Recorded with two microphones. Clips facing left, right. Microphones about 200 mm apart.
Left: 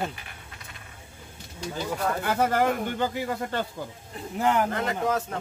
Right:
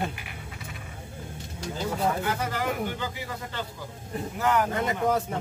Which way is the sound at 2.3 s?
55° left (ahead or behind).